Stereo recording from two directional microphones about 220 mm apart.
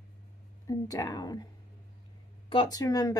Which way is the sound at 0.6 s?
15° left (ahead or behind).